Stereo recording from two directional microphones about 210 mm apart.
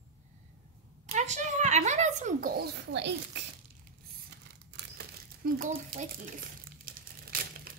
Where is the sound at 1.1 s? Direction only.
35° right (ahead or behind); by 3.2 s 55° right (ahead or behind).